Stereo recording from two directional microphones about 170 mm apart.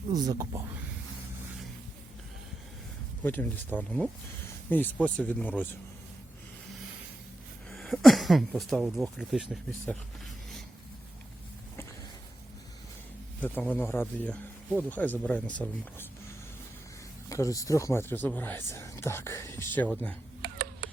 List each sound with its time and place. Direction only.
0.1 s speech: 20° right (ahead or behind)
3.2 s speech: 10° left (ahead or behind)
7.7 s speech: centre (ahead or behind)
13.4 s speech: 10° left (ahead or behind)
17.2 s speech: 20° left (ahead or behind)